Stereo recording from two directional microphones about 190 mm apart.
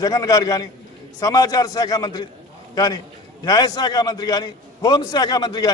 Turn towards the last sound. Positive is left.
turn(degrees=20)  # may be behind; listen again after turning